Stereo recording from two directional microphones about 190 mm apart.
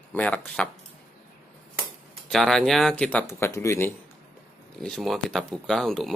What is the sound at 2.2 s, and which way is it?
A man's voice, centre (ahead or behind).